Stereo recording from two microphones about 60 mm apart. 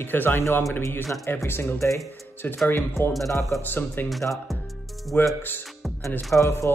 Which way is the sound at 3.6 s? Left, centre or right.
Left.